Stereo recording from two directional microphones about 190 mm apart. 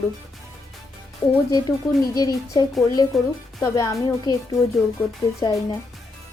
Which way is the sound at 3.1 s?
Centre (ahead or behind).